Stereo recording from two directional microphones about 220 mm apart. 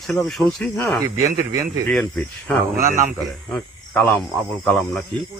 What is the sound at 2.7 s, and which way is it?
Speech, 35° right (ahead or behind).